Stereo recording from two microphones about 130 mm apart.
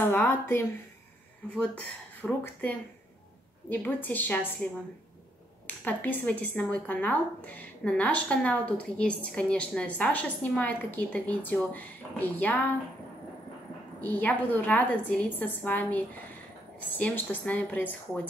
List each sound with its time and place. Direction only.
0.0 s speech: 15° left (ahead or behind)
5.9 s speech: 15° left (ahead or behind)
14.0 s speech: 10° left (ahead or behind)